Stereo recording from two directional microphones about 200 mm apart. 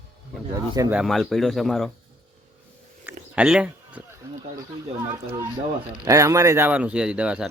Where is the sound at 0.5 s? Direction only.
20° right (ahead or behind).